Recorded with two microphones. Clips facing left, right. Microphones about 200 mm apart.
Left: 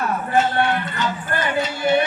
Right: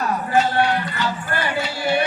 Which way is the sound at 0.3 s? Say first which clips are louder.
Even; 20° left (ahead or behind).